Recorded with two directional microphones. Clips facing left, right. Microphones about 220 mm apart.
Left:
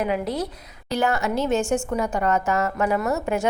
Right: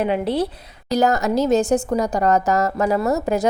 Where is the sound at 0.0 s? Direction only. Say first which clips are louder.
Right 4 dB; 30° right (ahead or behind).